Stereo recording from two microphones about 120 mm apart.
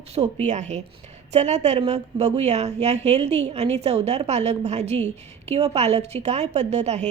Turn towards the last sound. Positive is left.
turn(degrees=-70)  # may be behind; listen again after turning